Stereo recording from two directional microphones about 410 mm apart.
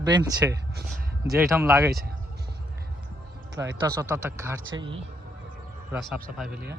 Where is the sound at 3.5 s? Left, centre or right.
Centre.